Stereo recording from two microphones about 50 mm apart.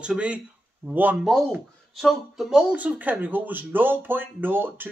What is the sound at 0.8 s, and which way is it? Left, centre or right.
Speech, right.